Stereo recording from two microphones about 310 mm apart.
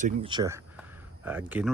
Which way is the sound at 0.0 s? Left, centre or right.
Centre.